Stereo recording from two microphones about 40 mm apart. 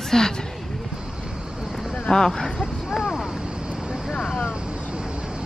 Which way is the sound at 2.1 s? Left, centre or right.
Centre.